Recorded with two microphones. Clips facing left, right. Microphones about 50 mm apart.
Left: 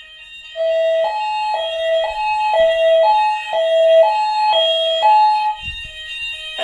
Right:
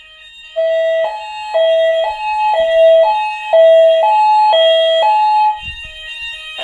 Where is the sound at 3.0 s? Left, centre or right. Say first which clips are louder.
Right 1 dB; right.